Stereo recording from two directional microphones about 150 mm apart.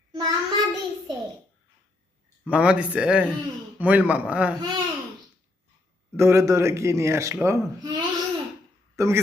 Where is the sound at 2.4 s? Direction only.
10° right (ahead or behind).